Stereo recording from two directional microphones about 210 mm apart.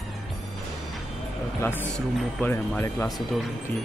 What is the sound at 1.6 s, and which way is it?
Speech, 10° left (ahead or behind).